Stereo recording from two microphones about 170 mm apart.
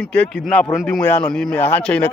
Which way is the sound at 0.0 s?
5° left (ahead or behind).